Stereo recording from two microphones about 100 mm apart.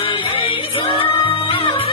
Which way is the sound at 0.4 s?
60° left (ahead or behind).